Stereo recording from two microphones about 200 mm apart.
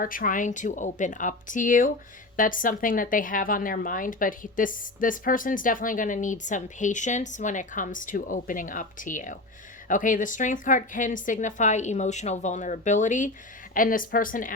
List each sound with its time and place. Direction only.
0.0 s a woman's voice: 45° left (ahead or behind)